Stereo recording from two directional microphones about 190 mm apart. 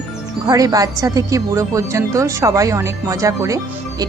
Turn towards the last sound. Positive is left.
turn(degrees=-15)  # may be behind; listen again after turning